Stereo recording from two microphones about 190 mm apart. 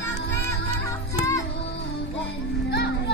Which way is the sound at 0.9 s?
15° left (ahead or behind).